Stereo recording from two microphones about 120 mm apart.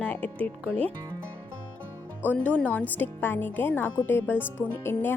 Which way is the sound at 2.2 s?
15° left (ahead or behind).